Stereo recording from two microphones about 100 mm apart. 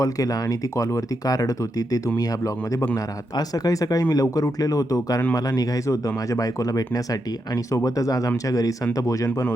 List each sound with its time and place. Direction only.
0.0 s speech: 40° left (ahead or behind)